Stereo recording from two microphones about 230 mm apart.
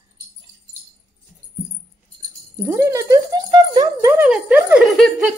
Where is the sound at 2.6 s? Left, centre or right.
Centre.